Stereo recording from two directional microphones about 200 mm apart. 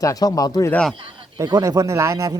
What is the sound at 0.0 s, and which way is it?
Speech, 15° left (ahead or behind).